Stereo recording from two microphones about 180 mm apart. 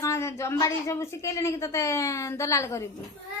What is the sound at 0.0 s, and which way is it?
Speech, 15° left (ahead or behind).